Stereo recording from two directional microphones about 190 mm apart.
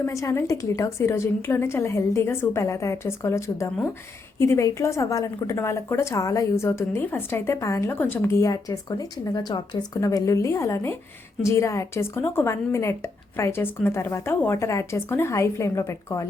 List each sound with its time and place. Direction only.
0.0 s a woman's voice: 15° left (ahead or behind)